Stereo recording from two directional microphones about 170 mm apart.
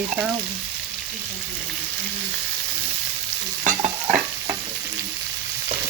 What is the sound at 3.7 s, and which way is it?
Stir, 45° right (ahead or behind).